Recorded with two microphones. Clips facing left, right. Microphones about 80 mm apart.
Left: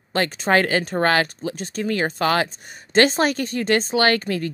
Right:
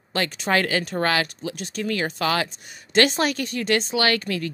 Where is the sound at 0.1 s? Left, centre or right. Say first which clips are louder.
Left 4 dB; left.